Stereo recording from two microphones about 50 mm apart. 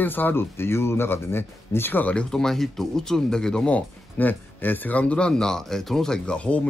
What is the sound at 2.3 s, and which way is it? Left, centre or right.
Speech, centre.